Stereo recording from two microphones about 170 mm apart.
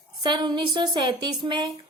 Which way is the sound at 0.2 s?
25° right (ahead or behind).